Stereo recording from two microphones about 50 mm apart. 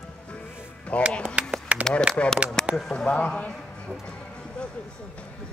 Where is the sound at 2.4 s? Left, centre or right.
Right.